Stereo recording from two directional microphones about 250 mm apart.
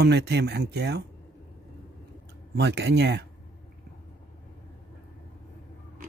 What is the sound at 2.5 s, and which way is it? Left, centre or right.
Speech, right.